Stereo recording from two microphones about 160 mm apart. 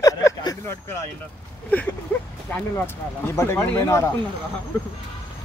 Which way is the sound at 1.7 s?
10° left (ahead or behind).